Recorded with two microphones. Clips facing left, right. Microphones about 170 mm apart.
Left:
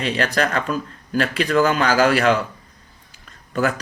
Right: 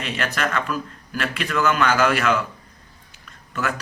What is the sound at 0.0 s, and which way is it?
Speech, 35° left (ahead or behind).